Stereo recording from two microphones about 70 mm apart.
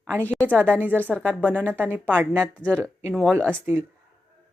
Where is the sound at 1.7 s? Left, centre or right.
Right.